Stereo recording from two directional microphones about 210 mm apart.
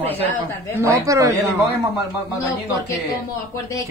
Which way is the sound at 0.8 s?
15° right (ahead or behind).